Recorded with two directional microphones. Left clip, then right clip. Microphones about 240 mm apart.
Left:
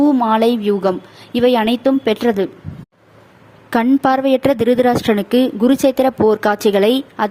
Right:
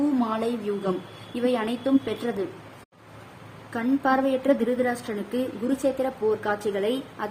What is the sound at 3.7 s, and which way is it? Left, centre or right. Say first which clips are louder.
A woman's voice: left 10 dB; left.